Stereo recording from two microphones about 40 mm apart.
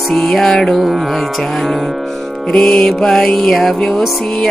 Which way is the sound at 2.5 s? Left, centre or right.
Left.